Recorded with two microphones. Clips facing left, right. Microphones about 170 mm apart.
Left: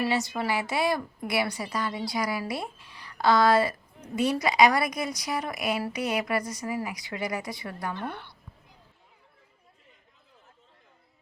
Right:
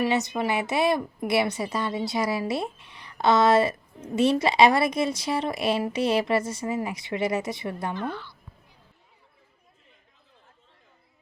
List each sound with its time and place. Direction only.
0.0 s a woman's voice: 20° right (ahead or behind)
8.1 s a woman's voice: 60° left (ahead or behind)